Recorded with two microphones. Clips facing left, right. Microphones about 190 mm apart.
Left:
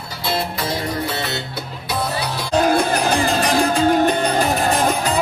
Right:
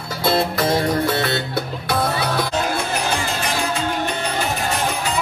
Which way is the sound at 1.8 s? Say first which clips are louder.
Right 1 dB; 55° right (ahead or behind).